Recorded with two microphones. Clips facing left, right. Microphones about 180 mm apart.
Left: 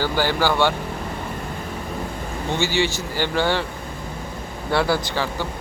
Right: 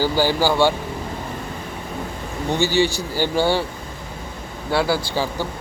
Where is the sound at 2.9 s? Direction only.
10° right (ahead or behind).